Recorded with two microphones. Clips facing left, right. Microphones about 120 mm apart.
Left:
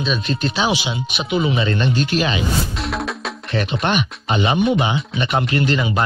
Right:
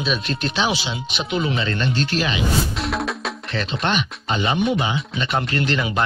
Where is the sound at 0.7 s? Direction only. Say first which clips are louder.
Left 3 dB; 15° left (ahead or behind).